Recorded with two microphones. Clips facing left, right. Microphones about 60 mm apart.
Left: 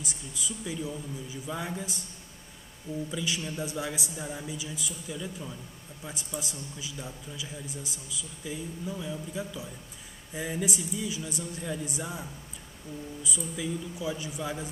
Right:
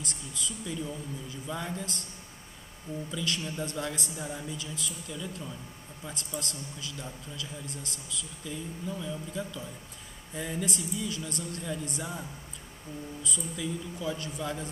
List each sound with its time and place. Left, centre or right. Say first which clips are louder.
0.0 s a man's voice: even; centre
3.1 s a man's voice: right 2 dB; centre